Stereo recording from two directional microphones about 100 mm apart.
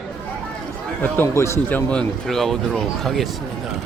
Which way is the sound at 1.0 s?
20° left (ahead or behind).